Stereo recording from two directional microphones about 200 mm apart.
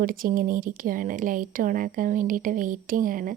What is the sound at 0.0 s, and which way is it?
Speech, 45° right (ahead or behind).